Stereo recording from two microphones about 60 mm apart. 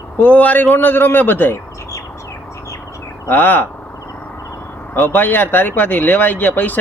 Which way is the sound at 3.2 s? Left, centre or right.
Left.